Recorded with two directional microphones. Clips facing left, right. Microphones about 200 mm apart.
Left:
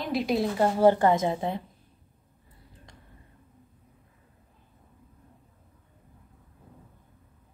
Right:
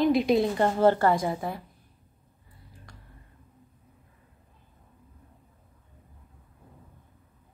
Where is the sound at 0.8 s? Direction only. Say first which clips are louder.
Left 2 dB; 15° left (ahead or behind).